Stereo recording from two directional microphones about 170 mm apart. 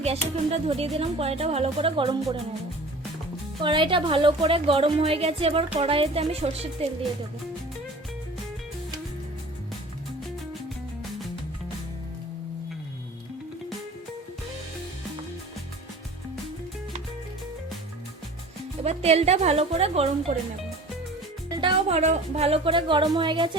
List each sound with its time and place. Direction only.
0.0 s a woman's voice: 35° right (ahead or behind)
3.6 s a woman's voice: 30° right (ahead or behind)
18.8 s a woman's voice: 40° right (ahead or behind)
21.6 s a woman's voice: 35° right (ahead or behind)